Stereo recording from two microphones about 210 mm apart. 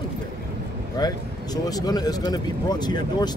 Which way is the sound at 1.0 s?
20° left (ahead or behind).